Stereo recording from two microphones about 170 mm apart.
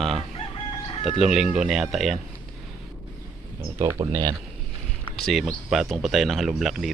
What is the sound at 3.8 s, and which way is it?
Speech, 15° right (ahead or behind).